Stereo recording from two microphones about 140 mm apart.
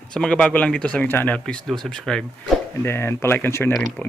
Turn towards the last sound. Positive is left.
turn(degrees=10)  # may be behind; listen again after turning